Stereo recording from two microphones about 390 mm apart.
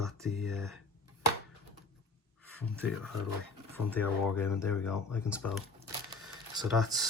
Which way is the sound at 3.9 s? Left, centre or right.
Centre.